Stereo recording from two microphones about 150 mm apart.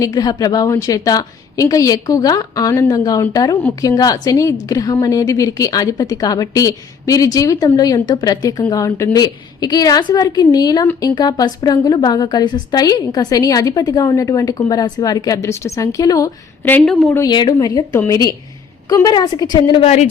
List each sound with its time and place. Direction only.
0.0 s a woman's voice: 25° left (ahead or behind)
16.8 s speech: 5° left (ahead or behind)
17.2 s a woman's voice: 30° left (ahead or behind)
19.8 s speech: 50° left (ahead or behind)